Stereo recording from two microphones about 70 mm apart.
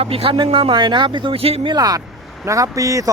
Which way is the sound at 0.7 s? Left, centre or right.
Right.